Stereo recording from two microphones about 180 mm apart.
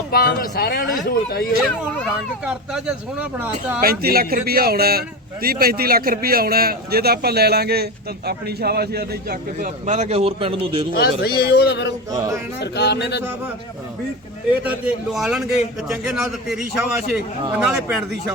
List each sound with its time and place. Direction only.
0.1 s speech: 55° left (ahead or behind)
1.6 s speech: 5° left (ahead or behind)
2.4 s speech: 5° right (ahead or behind)
3.8 s a man's voice: 55° right (ahead or behind); by 10.8 s 30° right (ahead or behind)
10.9 s speech: 60° left (ahead or behind)
11.9 s a sound: 20° right (ahead or behind)
12.5 s speech: 70° left (ahead or behind)
14.6 s a man's voice: 5° right (ahead or behind)